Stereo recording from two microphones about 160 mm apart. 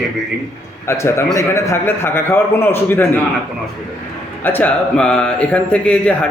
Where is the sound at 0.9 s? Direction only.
15° left (ahead or behind).